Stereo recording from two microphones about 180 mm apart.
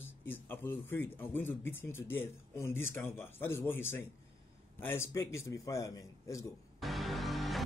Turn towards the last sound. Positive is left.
turn(degrees=0)  # may be behind; listen again after turning